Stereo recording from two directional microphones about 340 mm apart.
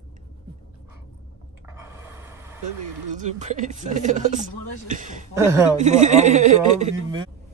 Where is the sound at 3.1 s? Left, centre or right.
Right.